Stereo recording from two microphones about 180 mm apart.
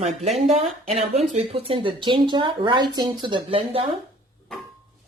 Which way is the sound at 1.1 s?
35° right (ahead or behind).